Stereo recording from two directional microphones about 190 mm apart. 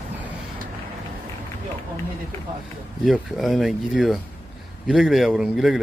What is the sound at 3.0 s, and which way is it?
Speech, centre (ahead or behind).